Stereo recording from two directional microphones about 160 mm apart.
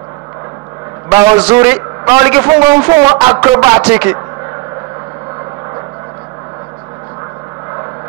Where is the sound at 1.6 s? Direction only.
15° right (ahead or behind).